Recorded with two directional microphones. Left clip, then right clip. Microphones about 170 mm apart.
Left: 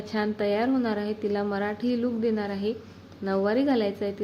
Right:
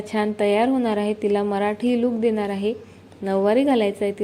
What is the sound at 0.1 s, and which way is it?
A woman's voice, 15° right (ahead or behind).